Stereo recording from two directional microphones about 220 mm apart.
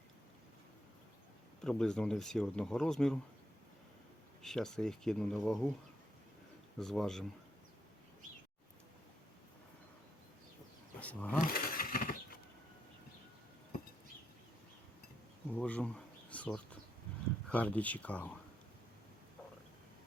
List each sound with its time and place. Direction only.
1.6 s speech: 5° left (ahead or behind)
4.4 s speech: centre (ahead or behind)
6.7 s speech: centre (ahead or behind)
11.0 s speech: 5° left (ahead or behind)
11.3 s a sound: 40° left (ahead or behind)
15.4 s speech: 5° left (ahead or behind)